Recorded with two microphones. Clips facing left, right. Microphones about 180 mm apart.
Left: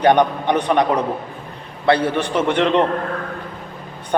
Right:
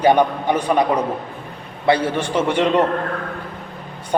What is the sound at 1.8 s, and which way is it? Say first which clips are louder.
Speech: left 1 dB; 60° left (ahead or behind).